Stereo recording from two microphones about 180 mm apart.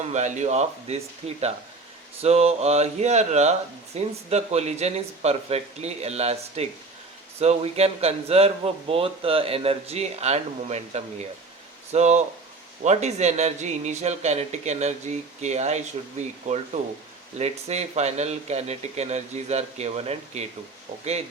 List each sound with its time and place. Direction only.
0.0 s a man's voice: 40° right (ahead or behind)